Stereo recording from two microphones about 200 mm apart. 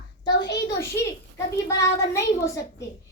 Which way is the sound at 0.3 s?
60° left (ahead or behind).